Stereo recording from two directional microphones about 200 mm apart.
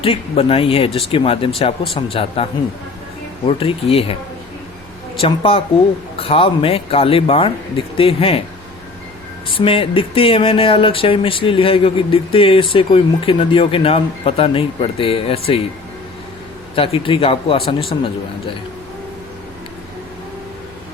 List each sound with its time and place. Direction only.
0.0 s speech: 30° left (ahead or behind)
5.2 s speech: 30° left (ahead or behind)
9.5 s speech: 25° left (ahead or behind)
16.7 s speech: 25° left (ahead or behind)